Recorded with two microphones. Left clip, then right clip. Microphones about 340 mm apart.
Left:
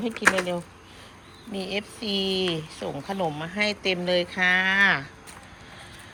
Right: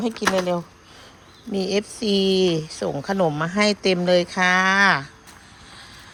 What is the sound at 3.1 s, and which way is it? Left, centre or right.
Speech, right.